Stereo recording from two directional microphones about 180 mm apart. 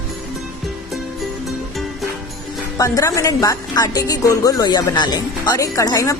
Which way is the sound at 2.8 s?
20° left (ahead or behind).